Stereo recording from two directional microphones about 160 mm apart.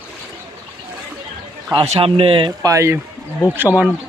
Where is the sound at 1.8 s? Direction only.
40° right (ahead or behind); by 3.9 s 10° right (ahead or behind).